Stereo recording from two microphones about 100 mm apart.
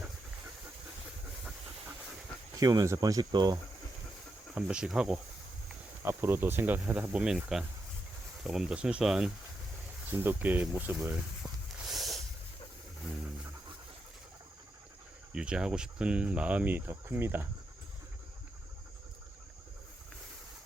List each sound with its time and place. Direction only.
2.6 s speech: 35° right (ahead or behind)
4.5 s speech: 10° right (ahead or behind)
6.1 s speech: 25° right (ahead or behind); by 9.3 s 5° right (ahead or behind)
10.1 s speech: 20° right (ahead or behind)
11.9 s snort: centre (ahead or behind)
15.3 s speech: 10° right (ahead or behind)